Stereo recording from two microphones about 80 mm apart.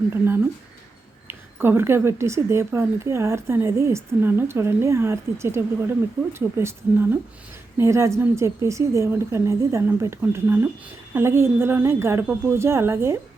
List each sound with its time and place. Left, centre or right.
0.1 s a woman's voice: right
6.2 s speech: centre
6.6 s a woman's voice: right